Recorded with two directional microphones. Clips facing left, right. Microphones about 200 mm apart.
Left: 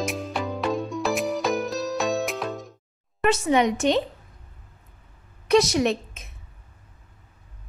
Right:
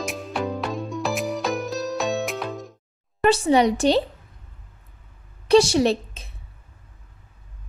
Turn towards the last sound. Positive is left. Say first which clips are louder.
# right 3 dB
turn(degrees=-30)  # may be behind; listen again after turning